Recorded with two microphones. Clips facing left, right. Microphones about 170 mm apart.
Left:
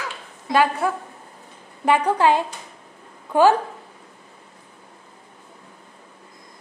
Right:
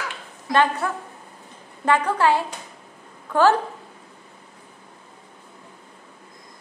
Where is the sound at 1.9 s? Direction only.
15° left (ahead or behind).